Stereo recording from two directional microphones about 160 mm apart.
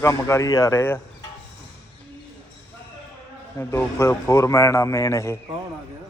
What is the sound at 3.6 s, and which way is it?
A man's voice, 15° left (ahead or behind).